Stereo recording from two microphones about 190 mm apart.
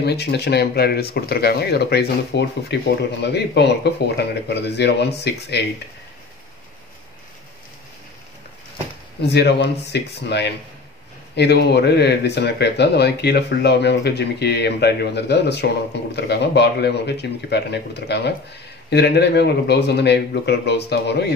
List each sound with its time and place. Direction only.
0.0 s speech: 60° left (ahead or behind)
9.3 s speech: 60° left (ahead or behind)